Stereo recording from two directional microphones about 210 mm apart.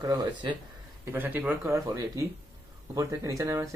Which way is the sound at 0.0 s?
20° right (ahead or behind).